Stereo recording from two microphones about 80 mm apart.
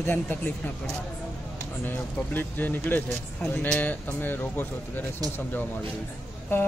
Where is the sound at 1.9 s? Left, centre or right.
Left.